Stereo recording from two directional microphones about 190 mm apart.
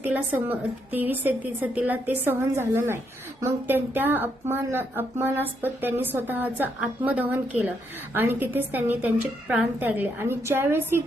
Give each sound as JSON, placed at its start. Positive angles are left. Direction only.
{"t": 0.0, "sound": "a woman's voice", "side_deg": -10}